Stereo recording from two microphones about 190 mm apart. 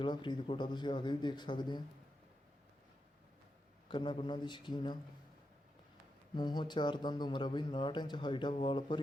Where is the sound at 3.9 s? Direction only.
25° left (ahead or behind).